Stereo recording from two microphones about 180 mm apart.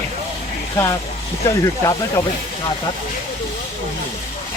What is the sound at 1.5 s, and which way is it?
Speech, 20° left (ahead or behind).